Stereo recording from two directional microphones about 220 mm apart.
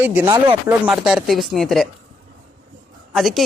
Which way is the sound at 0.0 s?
10° right (ahead or behind).